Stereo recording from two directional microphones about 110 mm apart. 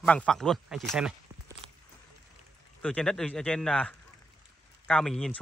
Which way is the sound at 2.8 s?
5° left (ahead or behind).